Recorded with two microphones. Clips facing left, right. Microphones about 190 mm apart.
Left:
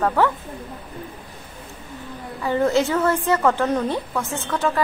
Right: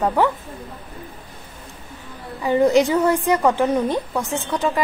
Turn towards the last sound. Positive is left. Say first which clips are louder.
# right 1 dB
turn(degrees=-15)  # may be behind; listen again after turning